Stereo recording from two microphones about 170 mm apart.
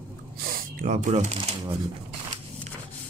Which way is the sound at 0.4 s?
60° right (ahead or behind).